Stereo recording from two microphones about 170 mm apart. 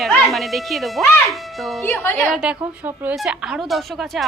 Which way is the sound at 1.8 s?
15° left (ahead or behind).